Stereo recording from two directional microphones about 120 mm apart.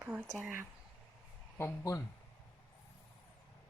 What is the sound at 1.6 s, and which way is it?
Speech, 25° left (ahead or behind).